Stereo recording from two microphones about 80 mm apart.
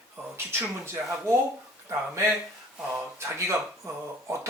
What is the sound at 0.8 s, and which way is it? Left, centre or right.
Speech, right.